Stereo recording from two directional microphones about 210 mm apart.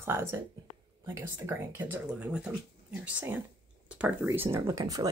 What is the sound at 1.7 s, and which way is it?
Speech, 10° right (ahead or behind).